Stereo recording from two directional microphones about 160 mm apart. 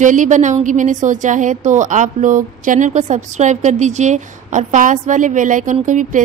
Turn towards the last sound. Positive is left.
turn(degrees=-55)  # may be behind; listen again after turning